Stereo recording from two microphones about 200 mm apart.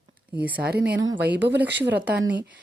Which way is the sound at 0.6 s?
55° right (ahead or behind).